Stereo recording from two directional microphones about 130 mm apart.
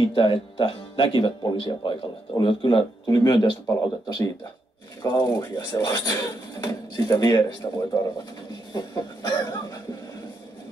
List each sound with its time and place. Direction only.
0.0 s speech: 40° left (ahead or behind)
8.7 s chicken: 30° left (ahead or behind)